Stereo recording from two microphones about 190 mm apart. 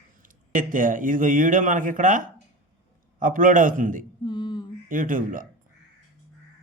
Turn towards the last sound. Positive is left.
turn(degrees=-45)  # may be behind; listen again after turning